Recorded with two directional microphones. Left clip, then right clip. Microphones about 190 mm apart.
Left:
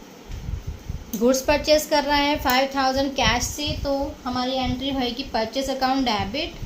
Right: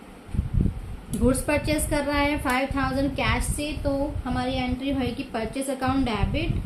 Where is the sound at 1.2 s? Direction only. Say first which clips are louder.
Left 4 dB; 35° left (ahead or behind).